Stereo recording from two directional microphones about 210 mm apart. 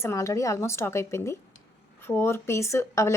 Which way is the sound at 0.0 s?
15° left (ahead or behind).